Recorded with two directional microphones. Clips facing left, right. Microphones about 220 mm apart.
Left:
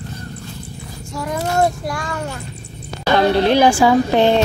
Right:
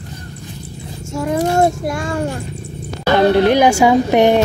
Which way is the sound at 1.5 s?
25° right (ahead or behind).